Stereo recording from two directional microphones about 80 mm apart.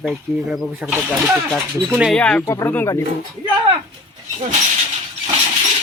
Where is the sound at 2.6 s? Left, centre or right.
Left.